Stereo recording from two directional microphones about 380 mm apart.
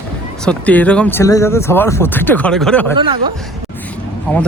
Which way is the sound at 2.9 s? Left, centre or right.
Centre.